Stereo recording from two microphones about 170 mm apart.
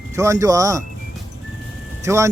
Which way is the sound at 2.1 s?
15° right (ahead or behind).